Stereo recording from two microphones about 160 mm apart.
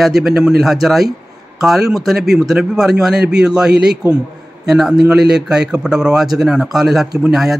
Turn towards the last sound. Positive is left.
turn(degrees=0)  # may be behind; listen again after turning